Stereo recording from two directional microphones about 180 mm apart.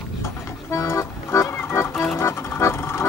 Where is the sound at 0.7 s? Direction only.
15° left (ahead or behind).